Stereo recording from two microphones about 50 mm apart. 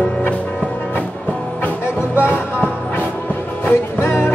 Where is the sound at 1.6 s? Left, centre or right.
Left.